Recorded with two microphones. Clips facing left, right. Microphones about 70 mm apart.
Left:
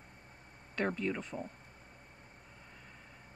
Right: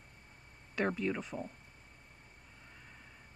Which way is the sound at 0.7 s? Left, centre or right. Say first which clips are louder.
Right 1 dB; centre.